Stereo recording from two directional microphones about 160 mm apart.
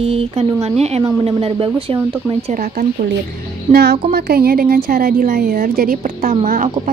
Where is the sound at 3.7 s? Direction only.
85° right.